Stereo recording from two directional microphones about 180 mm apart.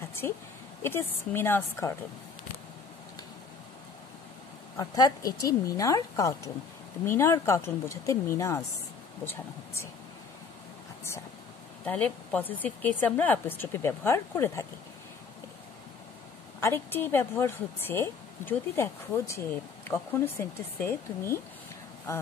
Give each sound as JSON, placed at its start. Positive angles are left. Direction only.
{"t": 0.8, "sound": "a woman's voice", "side_deg": 10}
{"t": 4.7, "sound": "a woman's voice", "side_deg": 20}
{"t": 11.8, "sound": "a woman's voice", "side_deg": 10}
{"t": 16.6, "sound": "a woman's voice", "side_deg": 10}